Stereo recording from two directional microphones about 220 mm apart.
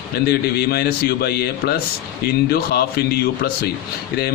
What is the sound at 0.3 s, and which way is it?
Speech, 45° left (ahead or behind).